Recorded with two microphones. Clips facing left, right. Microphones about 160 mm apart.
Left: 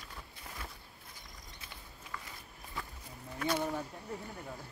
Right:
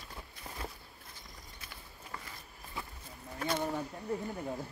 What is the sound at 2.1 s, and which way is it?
Walk, 30° right (ahead or behind).